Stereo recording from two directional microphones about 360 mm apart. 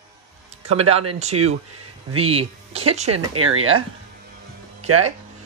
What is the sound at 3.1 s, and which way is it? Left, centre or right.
Speech, right.